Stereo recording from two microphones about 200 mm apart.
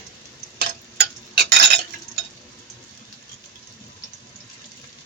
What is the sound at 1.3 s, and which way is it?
Stir, 55° right (ahead or behind).